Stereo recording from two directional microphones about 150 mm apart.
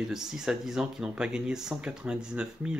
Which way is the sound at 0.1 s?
5° right (ahead or behind).